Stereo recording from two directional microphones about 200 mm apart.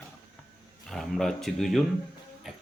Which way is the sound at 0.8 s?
Centre (ahead or behind).